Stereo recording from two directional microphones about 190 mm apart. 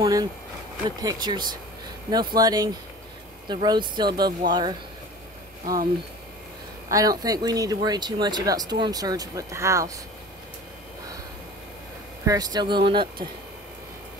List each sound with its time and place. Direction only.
0.0 s speech: 20° right (ahead or behind)
6.9 s speech: 20° right (ahead or behind)
12.3 s speech: 20° right (ahead or behind)